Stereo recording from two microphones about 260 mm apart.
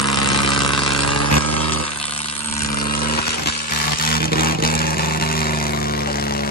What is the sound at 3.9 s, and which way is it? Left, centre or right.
Vehicle, left.